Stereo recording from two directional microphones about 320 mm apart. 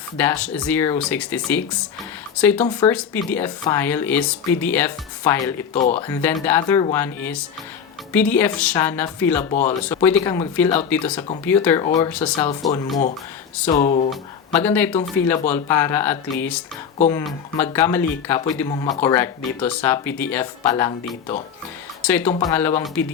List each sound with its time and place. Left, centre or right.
0.2 s speech: centre
9.5 s speech: left
9.8 s speech: centre
13.7 s speech: left
14.5 s speech: centre